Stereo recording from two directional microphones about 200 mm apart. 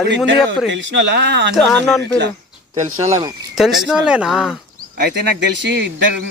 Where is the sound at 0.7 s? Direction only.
65° right (ahead or behind).